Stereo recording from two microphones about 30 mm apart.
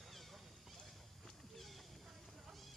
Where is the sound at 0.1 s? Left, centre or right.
Centre.